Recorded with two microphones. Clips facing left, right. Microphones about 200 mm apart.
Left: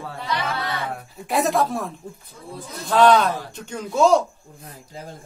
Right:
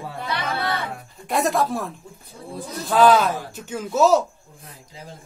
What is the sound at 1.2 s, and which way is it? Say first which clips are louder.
Speech: left 1 dB; centre (ahead or behind).